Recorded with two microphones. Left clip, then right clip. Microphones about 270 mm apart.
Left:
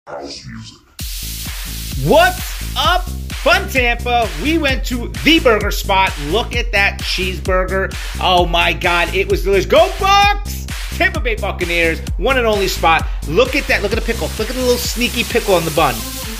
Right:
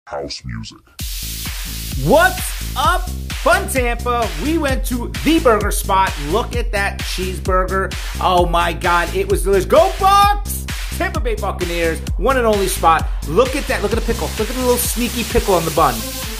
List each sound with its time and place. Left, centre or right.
2.0 s sizzle: centre
3.4 s speech: centre